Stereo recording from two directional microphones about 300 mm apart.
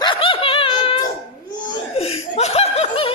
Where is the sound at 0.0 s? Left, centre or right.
Centre.